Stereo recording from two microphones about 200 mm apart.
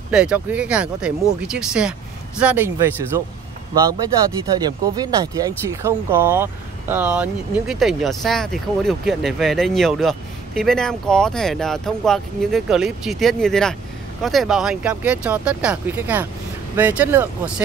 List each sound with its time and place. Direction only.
0.1 s speech: 5° right (ahead or behind)
4.6 s speech: 20° right (ahead or behind)